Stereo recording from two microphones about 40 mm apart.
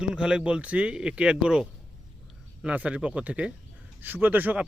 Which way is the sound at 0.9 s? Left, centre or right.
Right.